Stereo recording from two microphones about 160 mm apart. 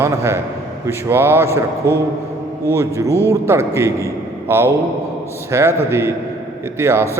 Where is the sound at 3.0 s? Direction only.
15° left (ahead or behind).